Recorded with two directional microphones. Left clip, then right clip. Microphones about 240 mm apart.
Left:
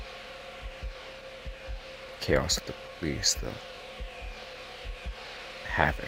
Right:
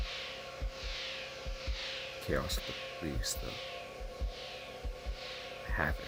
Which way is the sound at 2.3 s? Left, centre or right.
Left.